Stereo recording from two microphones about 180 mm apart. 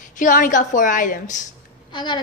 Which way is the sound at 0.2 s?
45° left (ahead or behind).